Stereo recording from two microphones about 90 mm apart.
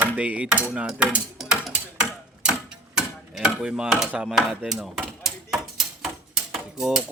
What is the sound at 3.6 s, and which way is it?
Mechanisms, 5° right (ahead or behind).